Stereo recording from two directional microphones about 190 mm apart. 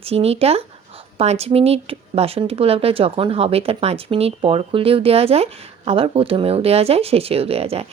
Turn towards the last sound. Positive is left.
turn(degrees=-30)  # may be behind; listen again after turning